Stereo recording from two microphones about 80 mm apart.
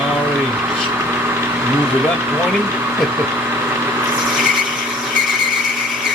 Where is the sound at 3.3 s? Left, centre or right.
Right.